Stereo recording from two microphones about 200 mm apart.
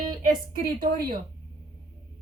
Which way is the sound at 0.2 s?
45° right (ahead or behind).